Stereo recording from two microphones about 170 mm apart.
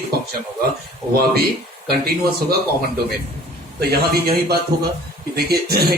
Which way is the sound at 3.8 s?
65° right (ahead or behind).